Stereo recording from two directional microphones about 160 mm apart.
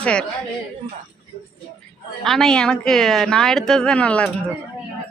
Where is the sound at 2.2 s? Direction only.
Centre (ahead or behind).